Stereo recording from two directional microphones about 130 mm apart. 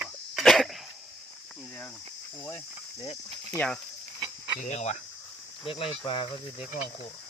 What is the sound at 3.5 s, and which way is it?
Speech, 10° left (ahead or behind).